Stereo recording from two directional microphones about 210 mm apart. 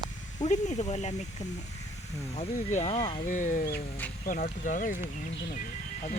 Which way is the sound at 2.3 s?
35° left (ahead or behind).